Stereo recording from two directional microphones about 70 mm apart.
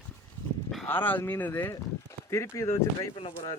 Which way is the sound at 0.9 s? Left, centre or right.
Left.